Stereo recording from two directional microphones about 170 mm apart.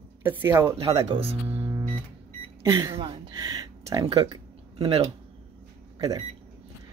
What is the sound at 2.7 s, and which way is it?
Speech, 20° right (ahead or behind).